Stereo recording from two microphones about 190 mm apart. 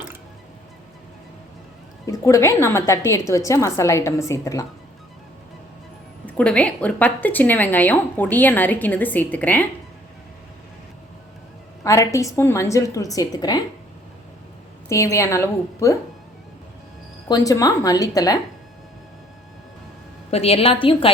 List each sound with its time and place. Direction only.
2.0 s a woman's voice: 15° left (ahead or behind)
6.2 s a woman's voice: 5° left (ahead or behind)
11.8 s a woman's voice: 15° left (ahead or behind)
14.8 s a woman's voice: 15° left (ahead or behind)
17.2 s speech: 20° left (ahead or behind)
20.3 s a woman's voice: 30° left (ahead or behind)